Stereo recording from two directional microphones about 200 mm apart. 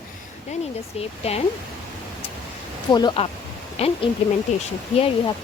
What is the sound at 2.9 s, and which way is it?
A woman's voice, 20° left (ahead or behind).